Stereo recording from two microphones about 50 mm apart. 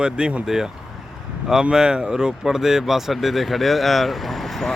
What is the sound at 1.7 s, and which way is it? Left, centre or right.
Speech, centre.